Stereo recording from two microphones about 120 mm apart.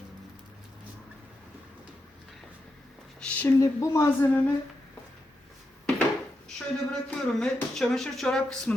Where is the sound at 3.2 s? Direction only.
15° left (ahead or behind).